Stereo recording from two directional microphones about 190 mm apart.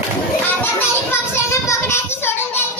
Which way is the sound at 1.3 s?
15° left (ahead or behind).